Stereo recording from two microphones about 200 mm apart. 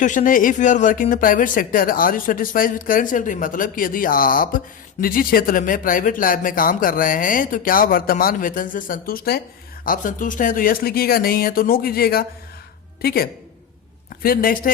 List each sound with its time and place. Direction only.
0.0 s a woman's voice: 40° left (ahead or behind)